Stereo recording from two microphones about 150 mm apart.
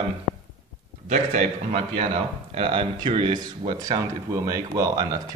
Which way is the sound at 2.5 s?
40° right (ahead or behind).